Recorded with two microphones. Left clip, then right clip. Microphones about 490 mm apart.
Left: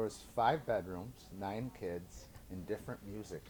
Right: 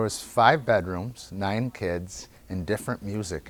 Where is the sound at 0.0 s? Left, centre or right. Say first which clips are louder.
Right 13 dB; right.